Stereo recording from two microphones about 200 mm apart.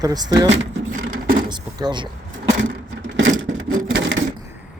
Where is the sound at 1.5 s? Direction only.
20° right (ahead or behind).